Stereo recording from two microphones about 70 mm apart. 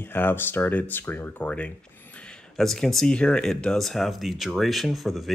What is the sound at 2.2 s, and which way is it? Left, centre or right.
Speech, centre.